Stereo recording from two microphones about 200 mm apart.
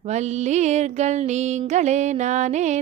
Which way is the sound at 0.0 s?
35° right (ahead or behind).